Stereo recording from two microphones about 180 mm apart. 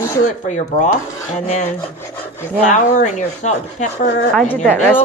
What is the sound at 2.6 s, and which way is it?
Speech, 40° left (ahead or behind).